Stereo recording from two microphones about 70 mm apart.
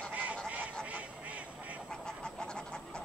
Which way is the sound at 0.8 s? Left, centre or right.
Right.